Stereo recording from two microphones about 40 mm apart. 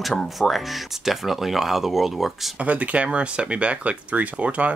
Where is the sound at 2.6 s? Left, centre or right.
Right.